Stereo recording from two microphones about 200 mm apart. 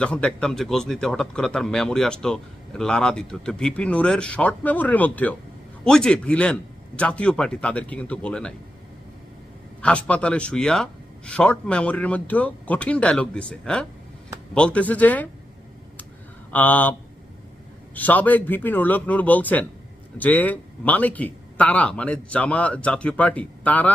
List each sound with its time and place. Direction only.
0.0 s speech: 5° left (ahead or behind)
9.8 s speech: 5° left (ahead or behind)
16.5 s speech: 10° left (ahead or behind)
17.9 s speech: 10° left (ahead or behind)